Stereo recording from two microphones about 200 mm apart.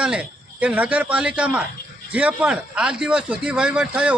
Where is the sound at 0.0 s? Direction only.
5° right (ahead or behind).